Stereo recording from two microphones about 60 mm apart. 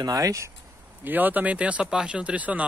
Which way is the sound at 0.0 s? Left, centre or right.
Right.